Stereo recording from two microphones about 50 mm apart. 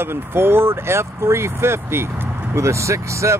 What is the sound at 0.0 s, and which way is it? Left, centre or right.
Speech, right.